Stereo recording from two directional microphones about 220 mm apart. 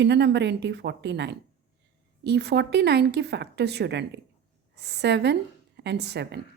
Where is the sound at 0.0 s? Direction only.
50° right (ahead or behind).